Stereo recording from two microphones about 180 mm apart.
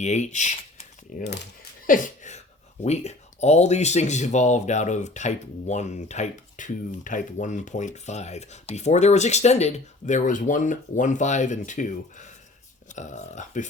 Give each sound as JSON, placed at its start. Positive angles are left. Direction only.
{"t": 0.0, "sound": "speech", "side_deg": 40}